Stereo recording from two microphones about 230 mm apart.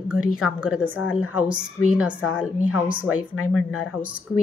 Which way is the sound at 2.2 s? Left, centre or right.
Left.